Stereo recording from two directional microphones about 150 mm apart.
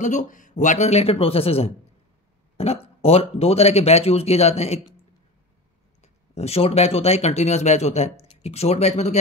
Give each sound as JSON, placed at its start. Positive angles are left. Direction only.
{"t": 0.0, "sound": "speech", "side_deg": 55}
{"t": 6.3, "sound": "speech", "side_deg": 45}